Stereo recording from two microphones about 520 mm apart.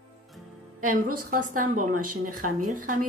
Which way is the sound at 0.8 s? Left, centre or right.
Centre.